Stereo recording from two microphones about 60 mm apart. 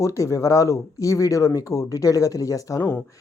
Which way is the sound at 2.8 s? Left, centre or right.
Left.